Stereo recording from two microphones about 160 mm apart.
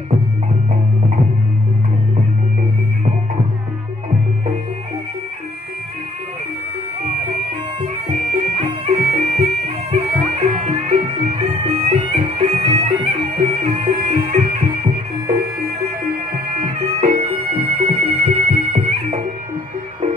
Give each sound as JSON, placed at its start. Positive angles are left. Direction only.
{"t": 7.8, "sound": "bagpipes", "side_deg": -45}
{"t": 13.0, "sound": "music", "side_deg": -40}
{"t": 17.5, "sound": "music", "side_deg": -35}